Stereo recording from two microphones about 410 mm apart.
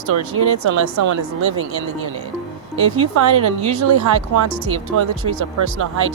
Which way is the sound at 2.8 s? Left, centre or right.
Right.